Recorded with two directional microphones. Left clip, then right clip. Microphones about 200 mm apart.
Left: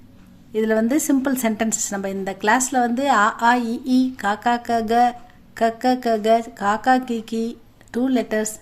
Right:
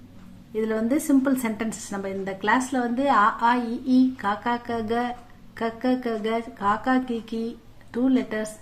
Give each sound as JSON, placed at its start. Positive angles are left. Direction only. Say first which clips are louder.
{"t": 0.5, "sound": "a woman's voice", "louder": "left 5 dB", "side_deg": 40}